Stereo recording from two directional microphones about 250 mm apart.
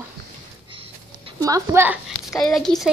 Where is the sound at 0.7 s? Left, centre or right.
Right.